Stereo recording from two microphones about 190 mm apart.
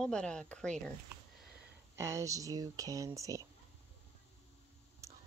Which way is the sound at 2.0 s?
15° right (ahead or behind).